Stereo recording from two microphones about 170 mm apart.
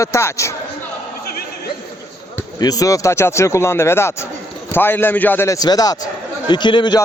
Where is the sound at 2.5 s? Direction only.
20° left (ahead or behind).